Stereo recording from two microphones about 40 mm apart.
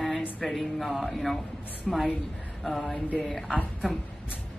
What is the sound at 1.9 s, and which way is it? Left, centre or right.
Speech, centre.